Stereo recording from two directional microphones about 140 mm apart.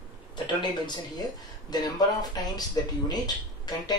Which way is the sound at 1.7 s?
30° left (ahead or behind).